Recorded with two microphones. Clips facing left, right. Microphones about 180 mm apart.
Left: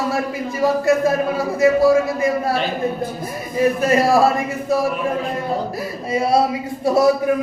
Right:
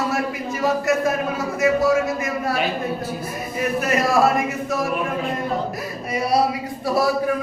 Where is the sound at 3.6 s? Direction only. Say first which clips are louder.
Left 5 dB; 30° left (ahead or behind).